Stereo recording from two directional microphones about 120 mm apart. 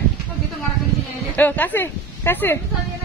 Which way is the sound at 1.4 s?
15° left (ahead or behind).